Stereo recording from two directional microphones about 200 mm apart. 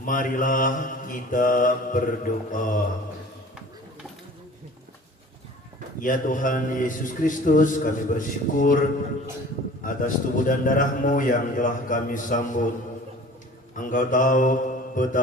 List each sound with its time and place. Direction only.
0.0 s a man's voice: 40° left (ahead or behind)
6.0 s a man's voice: 40° left (ahead or behind)
13.7 s a man's voice: 40° left (ahead or behind)